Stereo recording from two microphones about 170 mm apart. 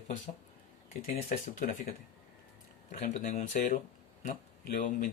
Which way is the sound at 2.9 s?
45° left (ahead or behind).